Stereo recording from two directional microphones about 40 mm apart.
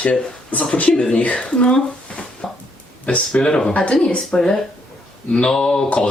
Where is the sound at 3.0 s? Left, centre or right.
Left.